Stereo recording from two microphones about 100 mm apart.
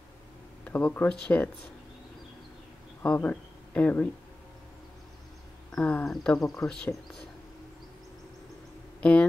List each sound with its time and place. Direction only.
0.7 s speech: 15° left (ahead or behind)
3.0 s speech: 15° left (ahead or behind)
5.8 s speech: 15° left (ahead or behind)
6.0 s speech: 5° left (ahead or behind)